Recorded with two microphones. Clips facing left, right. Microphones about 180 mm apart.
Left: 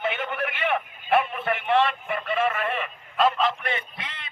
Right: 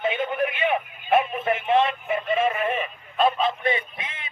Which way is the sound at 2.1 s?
20° right (ahead or behind).